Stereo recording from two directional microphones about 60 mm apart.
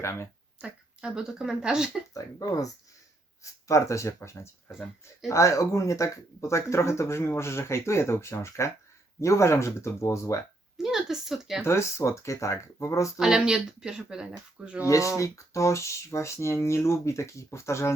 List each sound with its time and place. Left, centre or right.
0.6 s speech: centre
2.1 s speech: left
3.7 s speech: left
10.8 s a woman's voice: centre
11.6 s speech: left
13.1 s speech: centre
14.8 s speech: left